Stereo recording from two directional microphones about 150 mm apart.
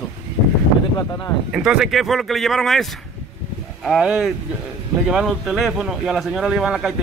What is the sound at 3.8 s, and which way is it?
Speech, centre (ahead or behind).